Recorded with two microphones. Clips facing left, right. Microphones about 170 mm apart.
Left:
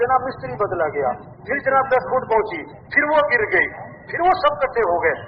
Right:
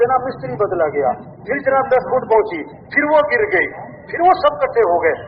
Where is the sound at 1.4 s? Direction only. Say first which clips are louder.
Right 4 dB; 30° right (ahead or behind).